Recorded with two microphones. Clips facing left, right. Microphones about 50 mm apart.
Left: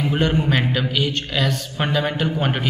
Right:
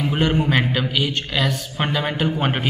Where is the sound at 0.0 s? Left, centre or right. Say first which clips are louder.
Even; centre.